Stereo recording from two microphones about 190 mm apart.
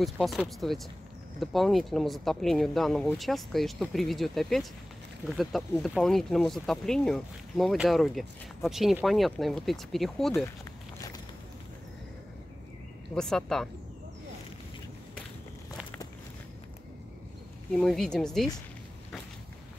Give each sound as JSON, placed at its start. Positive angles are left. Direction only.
{"t": 0.0, "sound": "speech", "side_deg": 0}
{"t": 10.3, "sound": "a sound", "side_deg": 15}
{"t": 13.1, "sound": "speech", "side_deg": 5}
{"t": 17.7, "sound": "speech", "side_deg": 5}